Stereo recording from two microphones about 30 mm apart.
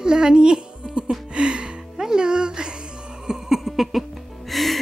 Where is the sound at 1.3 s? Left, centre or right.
Right.